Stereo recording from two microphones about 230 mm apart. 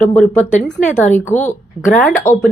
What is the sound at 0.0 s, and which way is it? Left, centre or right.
Speech, centre.